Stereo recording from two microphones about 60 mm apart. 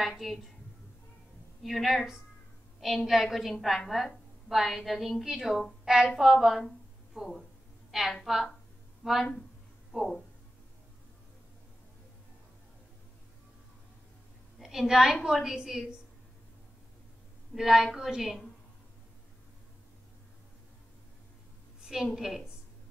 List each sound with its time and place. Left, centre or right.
0.0 s a woman's voice: centre
1.6 s a woman's voice: centre
9.0 s speech: centre
9.9 s a woman's voice: centre
14.6 s a woman's voice: centre
17.6 s a woman's voice: centre
21.8 s a woman's voice: centre